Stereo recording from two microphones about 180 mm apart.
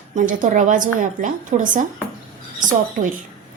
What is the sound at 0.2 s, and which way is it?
A woman's voice, 50° right (ahead or behind).